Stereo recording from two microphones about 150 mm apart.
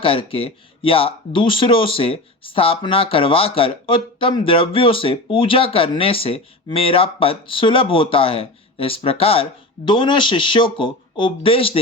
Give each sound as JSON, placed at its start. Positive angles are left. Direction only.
{"t": 0.0, "sound": "speech", "side_deg": 35}